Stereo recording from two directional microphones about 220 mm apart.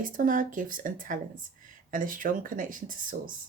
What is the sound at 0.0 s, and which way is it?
Speech, 40° right (ahead or behind).